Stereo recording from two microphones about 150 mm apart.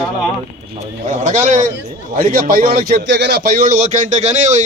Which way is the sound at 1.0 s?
55° right (ahead or behind).